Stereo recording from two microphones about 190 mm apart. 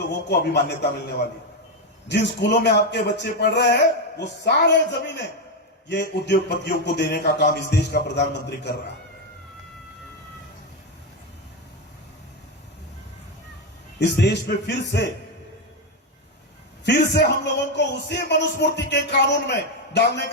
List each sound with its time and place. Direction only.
0.3 s a man's voice: 60° left (ahead or behind)
2.0 s a man's voice: 65° left (ahead or behind)
14.0 s a man's voice: 65° left (ahead or behind)
16.8 s a man's voice: 60° left (ahead or behind)